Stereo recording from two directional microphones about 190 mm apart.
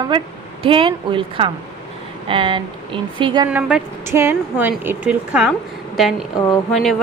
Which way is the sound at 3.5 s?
5° right (ahead or behind).